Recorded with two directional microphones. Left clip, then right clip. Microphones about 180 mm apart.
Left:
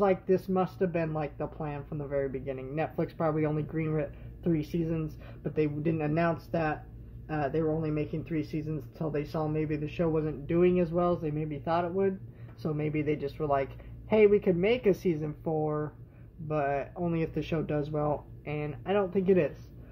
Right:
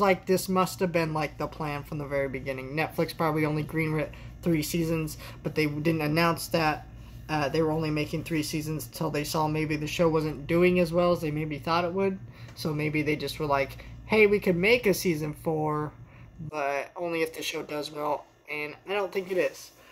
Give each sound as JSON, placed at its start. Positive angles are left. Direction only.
{"t": 0.0, "sound": "speech", "side_deg": -10}